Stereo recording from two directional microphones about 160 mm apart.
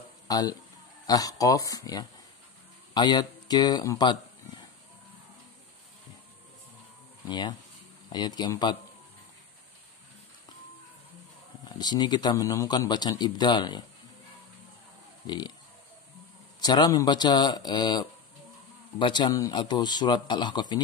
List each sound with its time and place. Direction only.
0.3 s speech: 25° left (ahead or behind)
7.2 s speech: 25° left (ahead or behind)
11.8 s speech: 25° left (ahead or behind)
15.2 s speech: 25° left (ahead or behind)
16.6 s speech: 25° left (ahead or behind)